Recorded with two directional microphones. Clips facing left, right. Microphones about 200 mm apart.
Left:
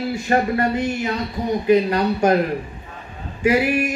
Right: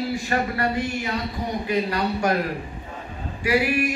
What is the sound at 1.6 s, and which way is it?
Speech, 20° left (ahead or behind).